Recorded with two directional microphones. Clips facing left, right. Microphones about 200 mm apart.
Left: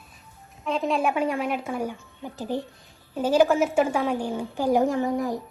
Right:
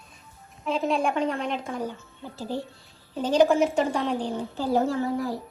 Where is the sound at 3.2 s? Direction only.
5° left (ahead or behind).